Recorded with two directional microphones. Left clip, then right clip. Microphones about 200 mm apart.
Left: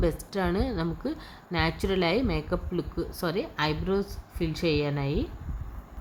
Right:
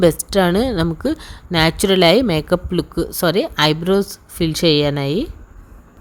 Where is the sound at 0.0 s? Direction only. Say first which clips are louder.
Right 14 dB; 45° right (ahead or behind).